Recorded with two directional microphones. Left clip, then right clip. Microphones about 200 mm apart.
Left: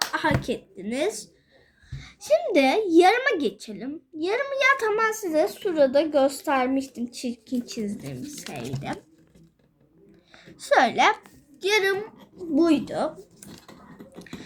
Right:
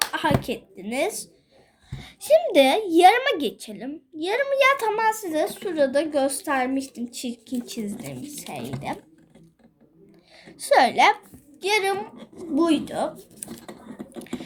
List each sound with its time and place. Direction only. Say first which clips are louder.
0.1 s a sound: right 1 dB; 10° left (ahead or behind)
0.4 s a woman's voice: left 1 dB; 10° left (ahead or behind)
10.3 s a woman's voice: right 2 dB; 10° left (ahead or behind)